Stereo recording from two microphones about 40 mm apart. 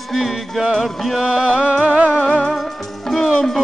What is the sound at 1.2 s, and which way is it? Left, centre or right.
Music, right.